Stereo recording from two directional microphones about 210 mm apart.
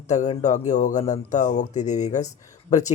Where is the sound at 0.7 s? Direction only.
35° left (ahead or behind).